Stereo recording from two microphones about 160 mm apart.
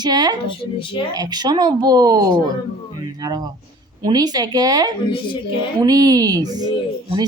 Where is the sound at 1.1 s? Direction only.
25° right (ahead or behind).